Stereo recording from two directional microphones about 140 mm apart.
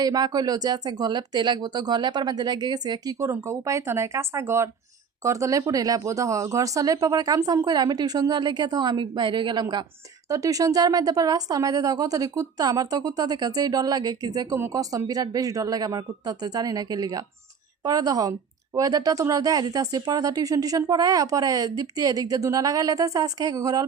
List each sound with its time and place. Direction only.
0.0 s speech: 30° right (ahead or behind)